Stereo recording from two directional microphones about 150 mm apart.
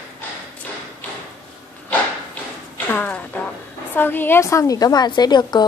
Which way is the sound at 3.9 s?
15° left (ahead or behind).